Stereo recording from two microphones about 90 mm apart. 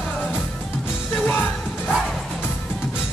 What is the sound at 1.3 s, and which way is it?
Music, 20° left (ahead or behind).